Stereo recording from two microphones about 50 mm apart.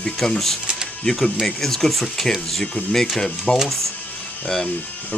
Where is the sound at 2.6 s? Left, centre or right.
Centre.